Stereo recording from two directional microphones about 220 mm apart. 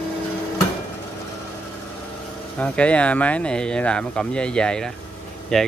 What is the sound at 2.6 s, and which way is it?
Speech, 5° left (ahead or behind).